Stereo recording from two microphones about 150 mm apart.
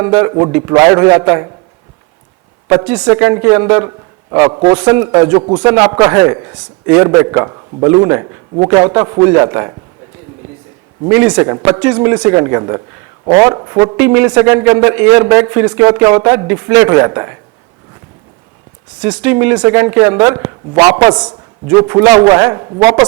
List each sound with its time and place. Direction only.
0.0 s a man's voice: 20° right (ahead or behind)
2.6 s a woman's voice: 15° right (ahead or behind)
4.7 s a woman's voice: 15° right (ahead or behind)
5.4 s speech: 30° right (ahead or behind)
5.7 s a woman's voice: 15° right (ahead or behind)
11.1 s a woman's voice: 15° right (ahead or behind)
11.3 s a man's voice: 25° right (ahead or behind)
19.0 s a woman's voice: 10° right (ahead or behind); by 23.0 s 30° right (ahead or behind)